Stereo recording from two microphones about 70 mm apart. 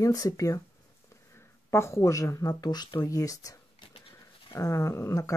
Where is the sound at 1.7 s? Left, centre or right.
Left.